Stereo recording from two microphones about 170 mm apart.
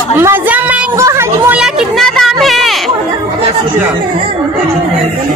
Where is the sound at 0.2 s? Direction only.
10° right (ahead or behind).